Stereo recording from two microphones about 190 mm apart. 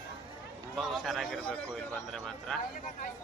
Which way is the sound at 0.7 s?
Centre (ahead or behind).